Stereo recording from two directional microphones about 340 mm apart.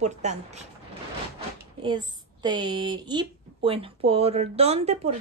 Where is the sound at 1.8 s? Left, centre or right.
Centre.